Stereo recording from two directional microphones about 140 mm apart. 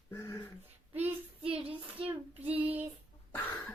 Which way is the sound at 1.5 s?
10° right (ahead or behind).